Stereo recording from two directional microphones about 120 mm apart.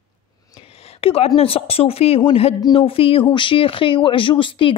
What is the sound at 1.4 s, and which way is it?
A woman's voice, 55° left (ahead or behind).